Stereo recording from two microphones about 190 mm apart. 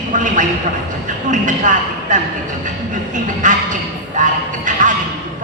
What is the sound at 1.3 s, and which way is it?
Speech, 40° right (ahead or behind).